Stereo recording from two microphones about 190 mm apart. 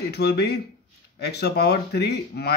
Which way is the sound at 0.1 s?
60° left (ahead or behind).